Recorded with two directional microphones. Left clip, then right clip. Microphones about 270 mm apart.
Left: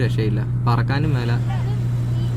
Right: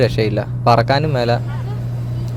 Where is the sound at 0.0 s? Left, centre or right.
Right.